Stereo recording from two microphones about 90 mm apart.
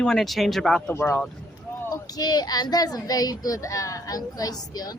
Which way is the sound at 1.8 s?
45° left (ahead or behind).